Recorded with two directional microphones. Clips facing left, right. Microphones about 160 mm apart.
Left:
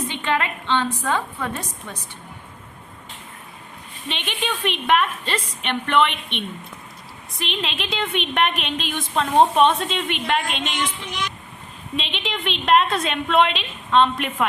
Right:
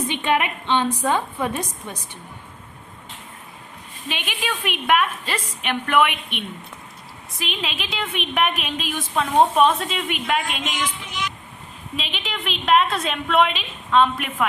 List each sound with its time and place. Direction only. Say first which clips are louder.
0.1 s a woman's voice: right 2 dB; 15° right (ahead or behind)
4.1 s a woman's voice: left 1 dB; 5° right (ahead or behind)
11.9 s a woman's voice: left 3 dB; 5° right (ahead or behind)